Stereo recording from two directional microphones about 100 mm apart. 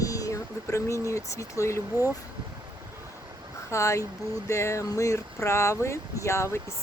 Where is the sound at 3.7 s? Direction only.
30° left (ahead or behind).